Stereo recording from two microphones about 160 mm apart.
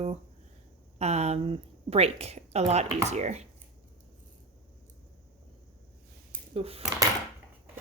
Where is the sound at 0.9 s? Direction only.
40° right (ahead or behind).